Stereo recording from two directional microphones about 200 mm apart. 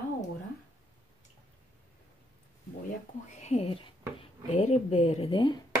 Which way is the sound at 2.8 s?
35° left (ahead or behind).